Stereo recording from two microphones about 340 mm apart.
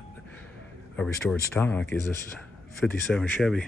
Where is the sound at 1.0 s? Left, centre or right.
Centre.